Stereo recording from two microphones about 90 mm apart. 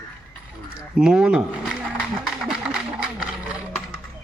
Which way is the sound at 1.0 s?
10° right (ahead or behind).